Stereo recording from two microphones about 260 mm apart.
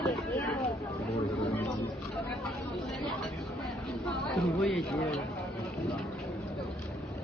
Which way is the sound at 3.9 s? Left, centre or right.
Centre.